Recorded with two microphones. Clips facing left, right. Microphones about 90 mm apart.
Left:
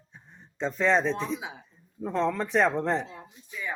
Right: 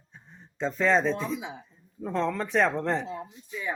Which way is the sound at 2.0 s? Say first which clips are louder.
Left 1 dB; 5° left (ahead or behind).